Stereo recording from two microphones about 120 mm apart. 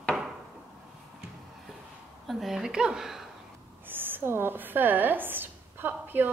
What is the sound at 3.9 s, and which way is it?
A woman's voice, 15° right (ahead or behind).